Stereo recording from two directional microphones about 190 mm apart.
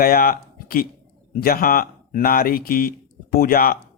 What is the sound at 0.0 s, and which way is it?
A man's voice, 50° left (ahead or behind).